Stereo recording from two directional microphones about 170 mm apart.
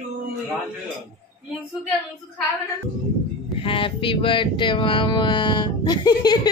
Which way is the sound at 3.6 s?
30° left (ahead or behind).